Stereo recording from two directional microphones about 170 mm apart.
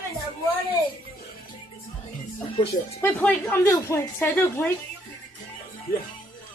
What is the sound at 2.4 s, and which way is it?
Speech, 35° left (ahead or behind).